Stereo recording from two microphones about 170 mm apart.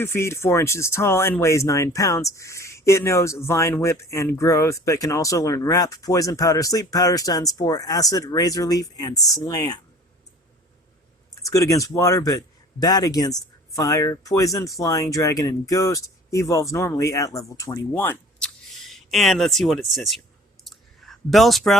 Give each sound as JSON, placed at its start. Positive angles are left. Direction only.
{"t": 0.0, "sound": "speech", "side_deg": 15}
{"t": 11.4, "sound": "speech", "side_deg": 20}
{"t": 20.7, "sound": "clicking", "side_deg": 0}